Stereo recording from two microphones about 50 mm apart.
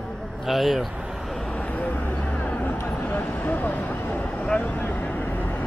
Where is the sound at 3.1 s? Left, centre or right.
Left.